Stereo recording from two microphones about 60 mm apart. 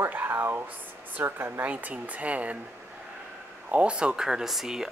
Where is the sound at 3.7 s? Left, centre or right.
Centre.